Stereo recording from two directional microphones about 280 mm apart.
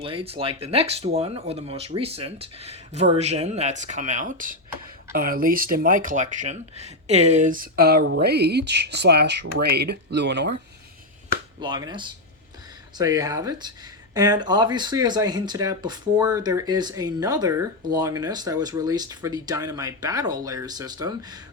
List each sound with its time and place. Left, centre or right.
0.0 s speech: centre; by 10.5 s right
11.6 s speech: centre